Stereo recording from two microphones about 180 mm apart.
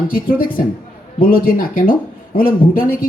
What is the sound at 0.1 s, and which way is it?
Speech, 50° left (ahead or behind).